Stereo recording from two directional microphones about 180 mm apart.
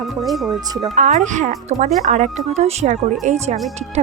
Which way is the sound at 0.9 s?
45° right (ahead or behind).